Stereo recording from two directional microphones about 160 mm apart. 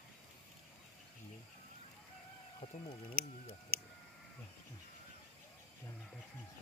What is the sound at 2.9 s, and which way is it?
Speech, 35° left (ahead or behind).